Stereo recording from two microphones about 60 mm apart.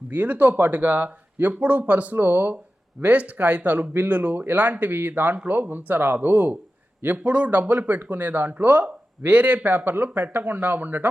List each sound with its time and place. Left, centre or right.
0.1 s speech: right